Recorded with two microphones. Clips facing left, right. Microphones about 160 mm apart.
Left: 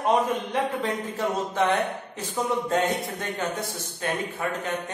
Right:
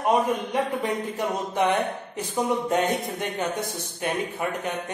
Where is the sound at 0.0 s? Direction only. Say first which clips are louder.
Right 1 dB; 15° right (ahead or behind).